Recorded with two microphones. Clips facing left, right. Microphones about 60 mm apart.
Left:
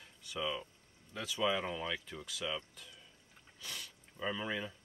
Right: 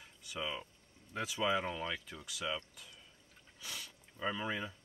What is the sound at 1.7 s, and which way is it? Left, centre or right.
Speech, centre.